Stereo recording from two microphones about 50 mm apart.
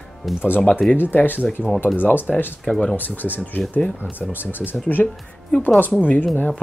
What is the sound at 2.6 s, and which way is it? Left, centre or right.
Speech, centre.